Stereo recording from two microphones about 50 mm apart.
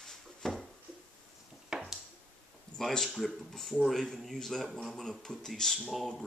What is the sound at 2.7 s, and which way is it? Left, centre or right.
Speech, centre.